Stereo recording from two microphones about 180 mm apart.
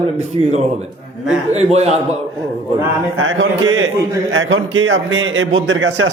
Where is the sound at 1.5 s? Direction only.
35° right (ahead or behind).